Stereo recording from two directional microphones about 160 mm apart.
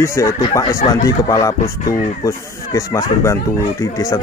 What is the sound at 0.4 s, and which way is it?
A man's voice, 30° left (ahead or behind).